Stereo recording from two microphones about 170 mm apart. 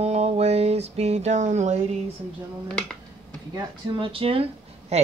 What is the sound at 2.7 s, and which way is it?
Speech, 5° left (ahead or behind).